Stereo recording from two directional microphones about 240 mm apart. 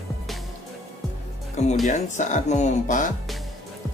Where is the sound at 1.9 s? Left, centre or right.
Left.